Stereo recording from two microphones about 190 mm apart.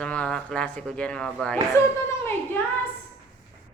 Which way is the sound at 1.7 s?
15° left (ahead or behind).